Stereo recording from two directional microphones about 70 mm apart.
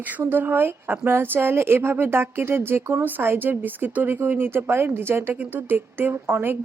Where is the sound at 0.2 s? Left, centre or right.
Right.